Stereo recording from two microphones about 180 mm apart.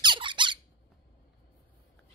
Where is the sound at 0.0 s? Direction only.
25° right (ahead or behind).